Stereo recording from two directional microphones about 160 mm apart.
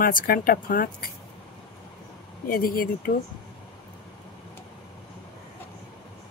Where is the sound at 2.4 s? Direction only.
60° left (ahead or behind).